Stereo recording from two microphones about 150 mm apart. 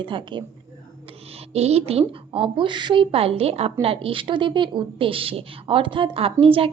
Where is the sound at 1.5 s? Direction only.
45° right (ahead or behind).